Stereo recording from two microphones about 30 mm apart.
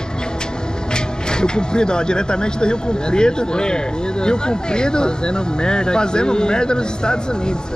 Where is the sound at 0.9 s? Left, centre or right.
Left.